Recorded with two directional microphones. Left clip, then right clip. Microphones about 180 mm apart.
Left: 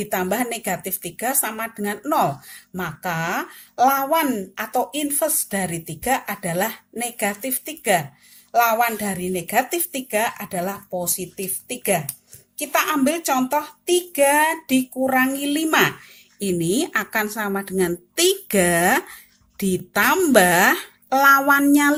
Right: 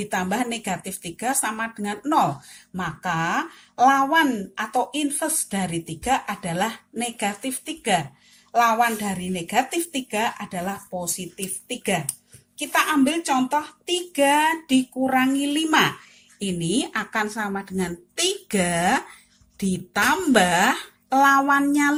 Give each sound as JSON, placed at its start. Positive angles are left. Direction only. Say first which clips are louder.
{"t": 0.0, "sound": "speech", "louder": "left 2 dB", "side_deg": 35}